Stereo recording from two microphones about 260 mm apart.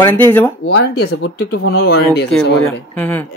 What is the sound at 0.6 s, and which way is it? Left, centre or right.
Speech, left.